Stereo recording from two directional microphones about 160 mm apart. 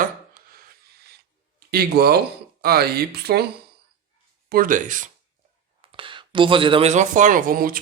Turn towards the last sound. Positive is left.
turn(degrees=-65)  # may be behind; listen again after turning